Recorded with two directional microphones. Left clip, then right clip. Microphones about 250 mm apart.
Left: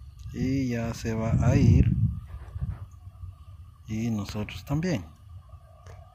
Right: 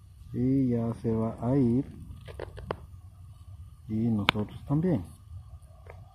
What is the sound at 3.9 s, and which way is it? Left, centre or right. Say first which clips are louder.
Speech: right 2 dB; centre.